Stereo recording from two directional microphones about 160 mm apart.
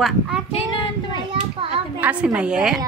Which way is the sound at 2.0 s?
5° right (ahead or behind).